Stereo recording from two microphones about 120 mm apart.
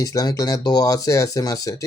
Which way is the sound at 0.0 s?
30° left (ahead or behind).